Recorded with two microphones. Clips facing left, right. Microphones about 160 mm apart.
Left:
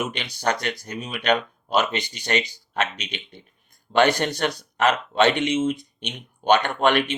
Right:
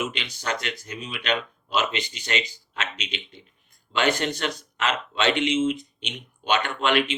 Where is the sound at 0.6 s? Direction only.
40° left (ahead or behind).